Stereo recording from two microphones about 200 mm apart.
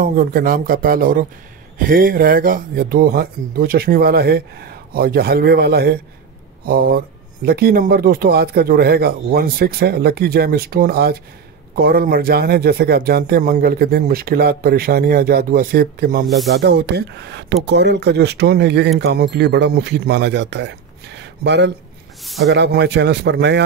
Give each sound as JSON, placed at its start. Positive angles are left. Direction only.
{"t": 0.0, "sound": "speech", "side_deg": -45}
{"t": 22.2, "sound": "a sound", "side_deg": 0}
{"t": 22.5, "sound": "speech", "side_deg": -60}